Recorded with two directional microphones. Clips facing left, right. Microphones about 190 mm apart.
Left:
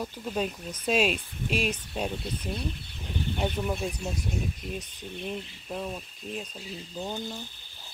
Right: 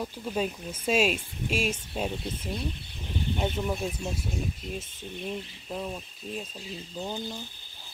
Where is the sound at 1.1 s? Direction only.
45° right (ahead or behind).